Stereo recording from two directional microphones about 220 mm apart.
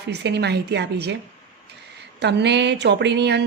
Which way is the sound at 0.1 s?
50° right (ahead or behind).